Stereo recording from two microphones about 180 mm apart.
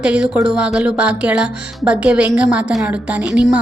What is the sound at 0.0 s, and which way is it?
A woman's voice, 5° right (ahead or behind).